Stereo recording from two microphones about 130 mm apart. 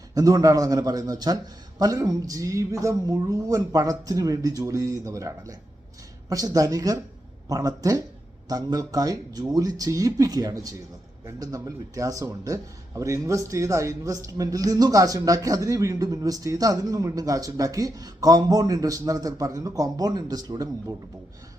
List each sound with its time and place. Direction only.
0.1 s a man's voice: 25° right (ahead or behind)